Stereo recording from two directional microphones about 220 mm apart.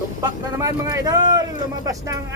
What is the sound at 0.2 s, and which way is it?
Speech, 15° right (ahead or behind).